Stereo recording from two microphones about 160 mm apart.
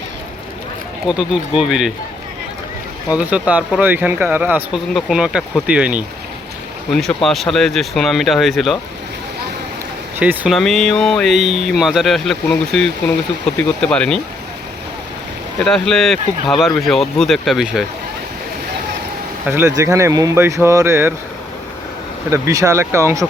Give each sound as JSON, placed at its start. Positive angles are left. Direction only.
{"t": 1.0, "sound": "speech", "side_deg": -5}
{"t": 3.1, "sound": "speech", "side_deg": -10}
{"t": 10.2, "sound": "speech", "side_deg": -10}
{"t": 10.5, "sound": "speech", "side_deg": 0}
{"t": 15.5, "sound": "speech", "side_deg": 5}
{"t": 19.5, "sound": "speech", "side_deg": -15}
{"t": 22.3, "sound": "speech", "side_deg": -20}